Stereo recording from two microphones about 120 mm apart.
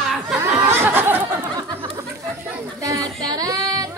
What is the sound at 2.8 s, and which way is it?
Child singing, 30° right (ahead or behind).